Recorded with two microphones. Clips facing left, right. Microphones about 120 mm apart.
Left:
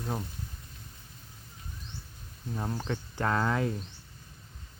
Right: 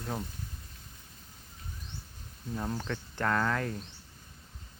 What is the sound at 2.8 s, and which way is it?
Speech, 15° left (ahead or behind).